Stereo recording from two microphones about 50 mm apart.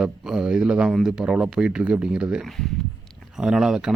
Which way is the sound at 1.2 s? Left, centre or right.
Centre.